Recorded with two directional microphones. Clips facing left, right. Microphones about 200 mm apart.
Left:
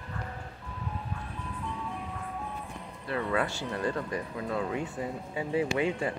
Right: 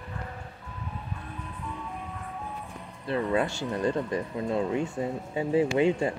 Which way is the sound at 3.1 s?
25° right (ahead or behind).